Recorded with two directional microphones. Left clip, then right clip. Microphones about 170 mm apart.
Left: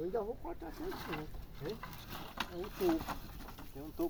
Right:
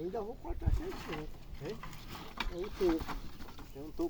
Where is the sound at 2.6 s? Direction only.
10° left (ahead or behind).